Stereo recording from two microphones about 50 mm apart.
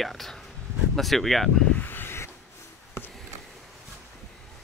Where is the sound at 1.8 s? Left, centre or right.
Left.